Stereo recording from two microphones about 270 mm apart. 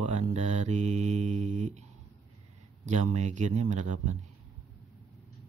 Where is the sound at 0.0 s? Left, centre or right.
Right.